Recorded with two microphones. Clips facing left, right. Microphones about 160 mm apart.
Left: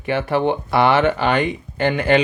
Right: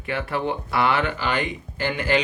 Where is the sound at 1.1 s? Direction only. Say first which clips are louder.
Left 7 dB; 65° left (ahead or behind).